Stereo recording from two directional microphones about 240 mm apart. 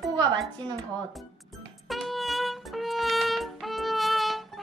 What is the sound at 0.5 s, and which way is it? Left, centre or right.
Speech, centre.